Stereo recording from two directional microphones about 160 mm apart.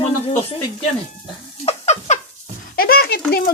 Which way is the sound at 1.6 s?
45° left (ahead or behind).